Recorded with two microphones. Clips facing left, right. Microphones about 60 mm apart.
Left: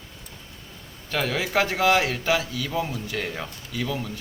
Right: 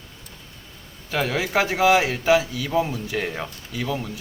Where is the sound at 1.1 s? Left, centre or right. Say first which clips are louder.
Right 2 dB; centre.